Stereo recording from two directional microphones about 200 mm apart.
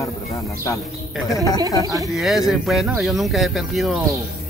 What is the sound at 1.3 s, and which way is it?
Speech, 15° left (ahead or behind).